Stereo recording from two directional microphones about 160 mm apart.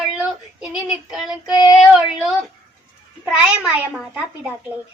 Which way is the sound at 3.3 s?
5° right (ahead or behind).